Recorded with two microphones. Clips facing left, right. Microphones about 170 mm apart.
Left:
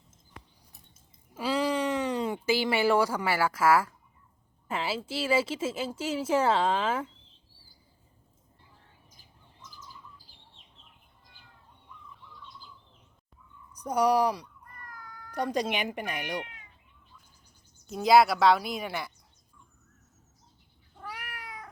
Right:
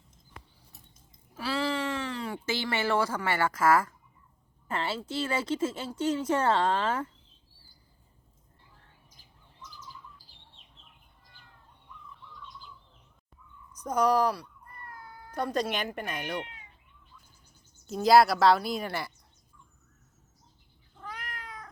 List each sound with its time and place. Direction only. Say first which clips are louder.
1.4 s speech: left 3 dB; 15° left (ahead or behind)
13.7 s speech: left 1 dB; 10° left (ahead or behind)
14.8 s meow: right 1 dB; 30° right (ahead or behind)
15.3 s speech: left 1 dB; 15° left (ahead or behind)
17.8 s a woman's voice: even; centre (ahead or behind)
21.0 s cat: even; 10° left (ahead or behind)